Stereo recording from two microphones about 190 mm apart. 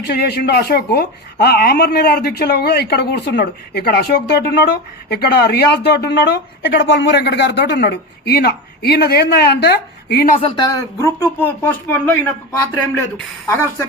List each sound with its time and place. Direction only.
0.0 s speech: 60° left (ahead or behind)
10.4 s speech: 20° left (ahead or behind)